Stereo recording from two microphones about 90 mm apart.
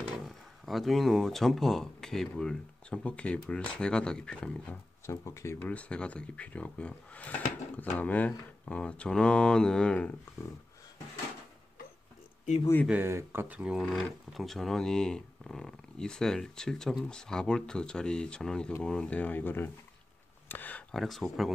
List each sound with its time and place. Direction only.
0.2 s speech: centre (ahead or behind)
5.0 s speech: 30° left (ahead or behind)
5.6 s speech: 15° left (ahead or behind)
12.9 s speech: 25° right (ahead or behind)
13.6 s speech: 10° right (ahead or behind); by 20.8 s 20° left (ahead or behind)
20.9 s speech: centre (ahead or behind)